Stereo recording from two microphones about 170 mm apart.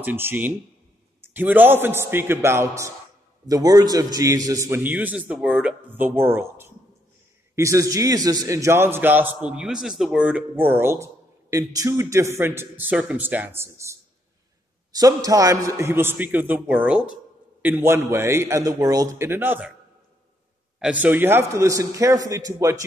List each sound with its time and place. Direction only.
0.0 s a man's voice: 10° right (ahead or behind)
20.8 s a man's voice: 10° right (ahead or behind)